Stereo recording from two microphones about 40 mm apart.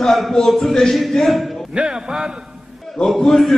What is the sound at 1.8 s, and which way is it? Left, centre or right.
Speech, centre.